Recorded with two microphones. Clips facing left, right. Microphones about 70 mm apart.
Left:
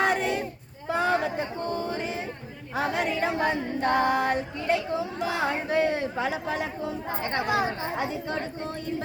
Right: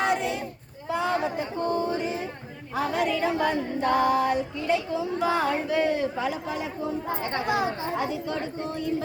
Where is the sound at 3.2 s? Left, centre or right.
Left.